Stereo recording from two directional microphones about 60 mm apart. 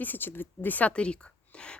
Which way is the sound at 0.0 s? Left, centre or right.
Left.